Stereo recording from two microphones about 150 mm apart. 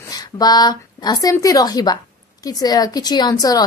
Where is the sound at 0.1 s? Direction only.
25° left (ahead or behind).